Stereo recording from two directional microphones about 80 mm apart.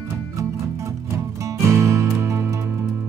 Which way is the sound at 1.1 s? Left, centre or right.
Right.